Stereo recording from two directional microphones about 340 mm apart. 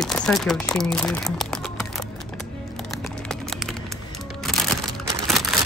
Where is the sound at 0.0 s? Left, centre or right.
Centre.